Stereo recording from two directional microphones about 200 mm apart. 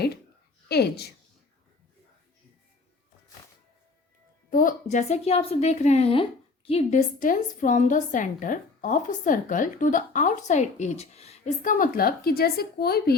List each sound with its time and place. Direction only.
0.7 s a woman's voice: 55° left (ahead or behind)
4.5 s a woman's voice: 40° left (ahead or behind)